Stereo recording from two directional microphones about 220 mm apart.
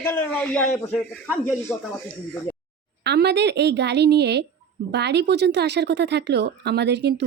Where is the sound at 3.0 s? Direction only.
50° right (ahead or behind).